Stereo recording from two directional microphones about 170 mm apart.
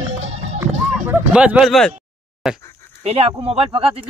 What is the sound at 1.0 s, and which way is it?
Speech, 5° right (ahead or behind).